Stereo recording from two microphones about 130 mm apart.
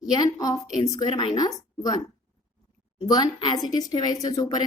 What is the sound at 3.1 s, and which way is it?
Speech, 30° left (ahead or behind).